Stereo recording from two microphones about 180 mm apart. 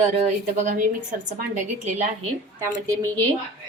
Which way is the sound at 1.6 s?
40° right (ahead or behind).